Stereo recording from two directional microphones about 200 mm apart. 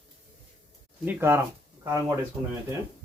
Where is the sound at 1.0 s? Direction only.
10° right (ahead or behind).